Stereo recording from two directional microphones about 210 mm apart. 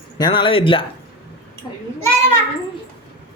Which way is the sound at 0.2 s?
20° left (ahead or behind).